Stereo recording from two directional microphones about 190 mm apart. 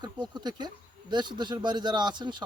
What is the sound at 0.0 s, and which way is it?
Speech, 20° right (ahead or behind).